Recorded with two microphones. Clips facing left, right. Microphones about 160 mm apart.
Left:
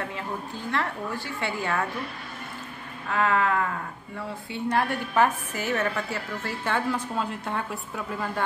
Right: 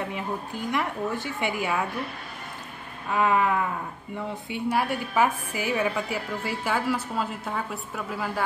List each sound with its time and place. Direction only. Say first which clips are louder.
0.0 s a woman's voice: right 2 dB; 15° right (ahead or behind)
3.1 s a woman's voice: right 1 dB; 15° right (ahead or behind)